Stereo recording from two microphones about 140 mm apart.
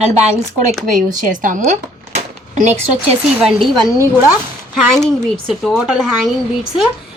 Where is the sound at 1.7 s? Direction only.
55° right (ahead or behind).